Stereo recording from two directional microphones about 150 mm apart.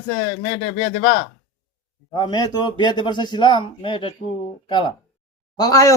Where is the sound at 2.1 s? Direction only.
30° left (ahead or behind).